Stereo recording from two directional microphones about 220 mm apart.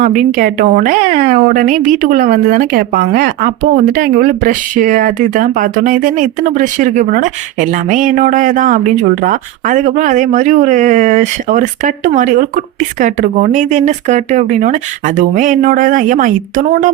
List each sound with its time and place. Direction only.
0.0 s a woman's voice: 35° right (ahead or behind)